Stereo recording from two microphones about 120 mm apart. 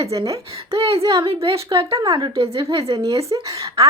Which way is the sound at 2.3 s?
50° right (ahead or behind).